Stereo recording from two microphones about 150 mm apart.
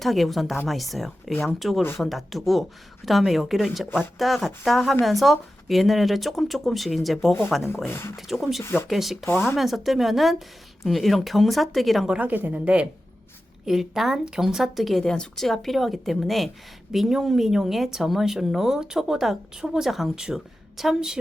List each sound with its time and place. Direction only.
0.0 s speech: centre (ahead or behind)
7.9 s speech: 15° left (ahead or behind)
8.1 s speech: centre (ahead or behind)
8.6 s speech: 15° left (ahead or behind)
8.9 s speech: centre (ahead or behind)